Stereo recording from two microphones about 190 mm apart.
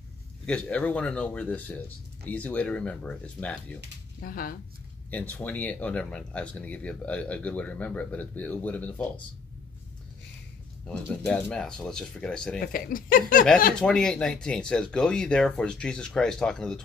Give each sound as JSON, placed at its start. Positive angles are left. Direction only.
{"t": 0.5, "sound": "speech", "side_deg": 5}
{"t": 4.2, "sound": "speech", "side_deg": 50}
{"t": 5.1, "sound": "speech", "side_deg": 10}
{"t": 10.9, "sound": "speech", "side_deg": 10}
{"t": 12.5, "sound": "speech", "side_deg": 45}
{"t": 13.7, "sound": "speech", "side_deg": 5}